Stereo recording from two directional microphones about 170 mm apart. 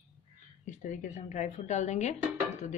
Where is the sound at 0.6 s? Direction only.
50° left (ahead or behind).